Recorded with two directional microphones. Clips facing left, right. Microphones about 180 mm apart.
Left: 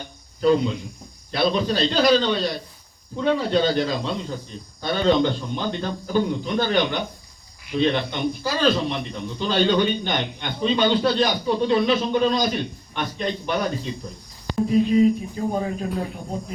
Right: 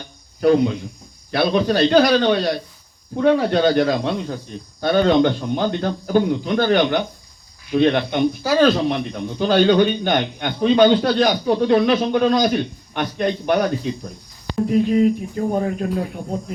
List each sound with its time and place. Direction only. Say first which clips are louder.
0.4 s a man's voice: right 3 dB; 60° right (ahead or behind)